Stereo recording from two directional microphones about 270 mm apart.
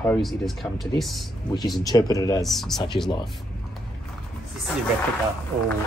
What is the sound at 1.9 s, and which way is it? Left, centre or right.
Speech, centre.